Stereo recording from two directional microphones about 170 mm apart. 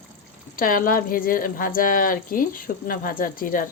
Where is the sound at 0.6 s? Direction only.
55° left (ahead or behind).